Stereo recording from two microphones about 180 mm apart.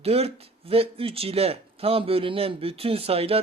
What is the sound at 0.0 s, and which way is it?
Speech, 35° right (ahead or behind).